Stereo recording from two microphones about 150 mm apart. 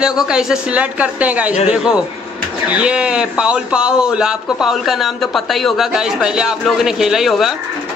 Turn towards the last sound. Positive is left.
turn(degrees=0)  # may be behind; listen again after turning